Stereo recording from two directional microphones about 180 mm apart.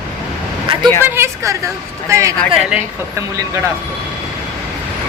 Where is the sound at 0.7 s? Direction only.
30° right (ahead or behind).